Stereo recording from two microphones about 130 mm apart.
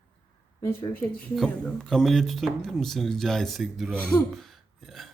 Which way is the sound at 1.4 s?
Centre (ahead or behind).